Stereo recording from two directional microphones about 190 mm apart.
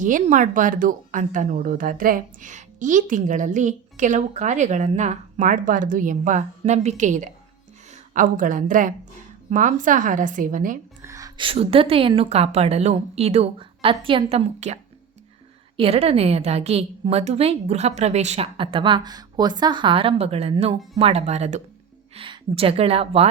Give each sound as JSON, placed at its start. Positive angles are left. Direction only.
{"t": 0.0, "sound": "a woman's voice", "side_deg": -40}
{"t": 11.0, "sound": "a woman's voice", "side_deg": -15}
{"t": 15.8, "sound": "a woman's voice", "side_deg": -30}